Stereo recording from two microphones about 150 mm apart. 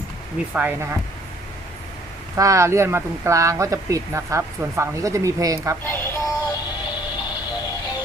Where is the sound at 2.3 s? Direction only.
20° right (ahead or behind).